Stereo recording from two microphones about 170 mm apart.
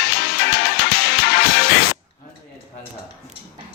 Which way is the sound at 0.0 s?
75° left (ahead or behind).